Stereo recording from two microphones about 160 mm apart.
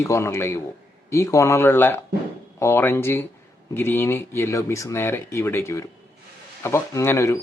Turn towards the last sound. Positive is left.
turn(degrees=15)  # may be behind; listen again after turning